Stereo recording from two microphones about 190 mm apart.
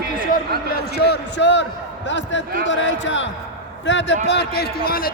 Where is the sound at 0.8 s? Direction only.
60° left (ahead or behind).